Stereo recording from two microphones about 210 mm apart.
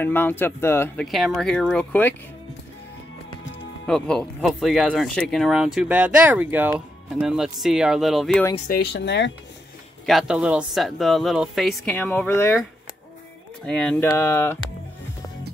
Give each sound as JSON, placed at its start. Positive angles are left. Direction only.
{"t": 0.0, "sound": "speech", "side_deg": 10}
{"t": 3.8, "sound": "speech", "side_deg": 5}
{"t": 8.5, "sound": "speech", "side_deg": 45}
{"t": 10.0, "sound": "speech", "side_deg": 0}
{"t": 13.7, "sound": "speech", "side_deg": 5}